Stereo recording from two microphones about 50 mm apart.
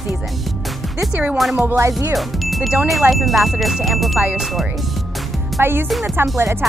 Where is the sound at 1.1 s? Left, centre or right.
Right.